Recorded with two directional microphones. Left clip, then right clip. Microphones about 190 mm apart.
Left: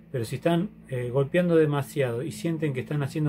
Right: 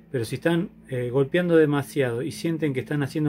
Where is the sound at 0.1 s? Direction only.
40° right (ahead or behind).